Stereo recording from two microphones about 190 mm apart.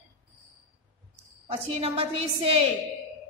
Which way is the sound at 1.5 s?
30° right (ahead or behind).